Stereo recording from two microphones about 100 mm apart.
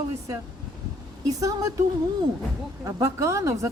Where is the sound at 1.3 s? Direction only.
35° right (ahead or behind).